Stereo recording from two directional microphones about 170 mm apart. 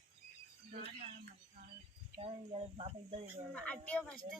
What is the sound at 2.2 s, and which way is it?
Speech, 35° right (ahead or behind).